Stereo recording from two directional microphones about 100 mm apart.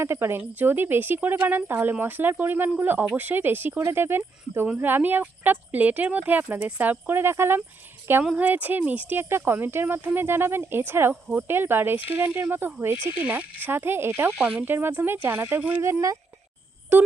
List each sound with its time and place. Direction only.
0.0 s speech: 25° right (ahead or behind)
8.2 s speech: 10° right (ahead or behind)
14.3 s speech: 5° right (ahead or behind)
14.6 s speech: 20° right (ahead or behind)